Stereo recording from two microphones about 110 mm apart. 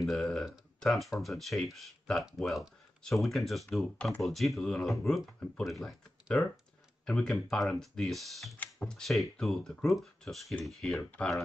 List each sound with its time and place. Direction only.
0.0 s speech: centre (ahead or behind)